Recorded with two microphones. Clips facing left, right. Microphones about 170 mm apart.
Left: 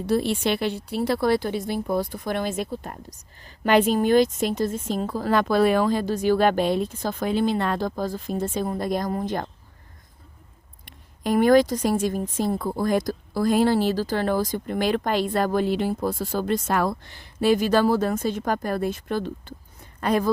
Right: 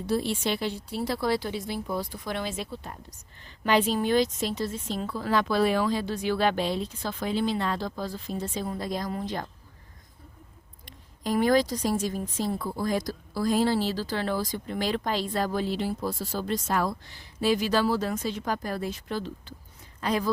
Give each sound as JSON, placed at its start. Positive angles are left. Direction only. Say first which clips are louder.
{"t": 0.1, "sound": "a woman's voice", "louder": "left 5 dB", "side_deg": 65}
{"t": 10.8, "sound": "a woman's voice", "louder": "left 5 dB", "side_deg": 60}